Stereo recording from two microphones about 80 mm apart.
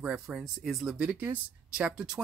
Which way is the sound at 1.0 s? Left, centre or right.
Centre.